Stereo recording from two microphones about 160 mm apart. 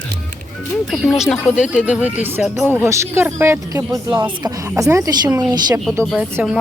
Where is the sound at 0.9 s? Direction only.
5° right (ahead or behind); by 5.8 s 25° right (ahead or behind).